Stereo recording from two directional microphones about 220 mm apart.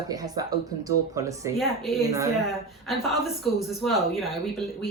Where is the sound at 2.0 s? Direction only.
15° right (ahead or behind).